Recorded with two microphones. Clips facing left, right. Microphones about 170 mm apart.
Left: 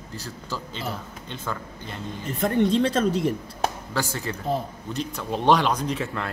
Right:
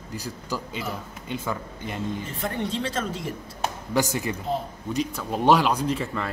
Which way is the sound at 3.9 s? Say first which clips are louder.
Right 4 dB; 15° right (ahead or behind).